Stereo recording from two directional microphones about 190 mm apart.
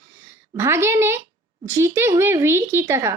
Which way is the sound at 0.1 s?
15° right (ahead or behind).